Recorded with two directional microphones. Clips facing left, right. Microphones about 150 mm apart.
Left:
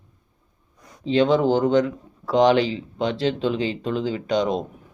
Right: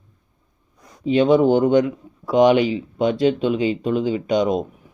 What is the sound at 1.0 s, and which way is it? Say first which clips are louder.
Speech: right 3 dB; 15° right (ahead or behind).